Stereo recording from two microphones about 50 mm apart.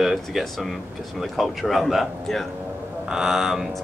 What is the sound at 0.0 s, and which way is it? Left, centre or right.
Speech, centre.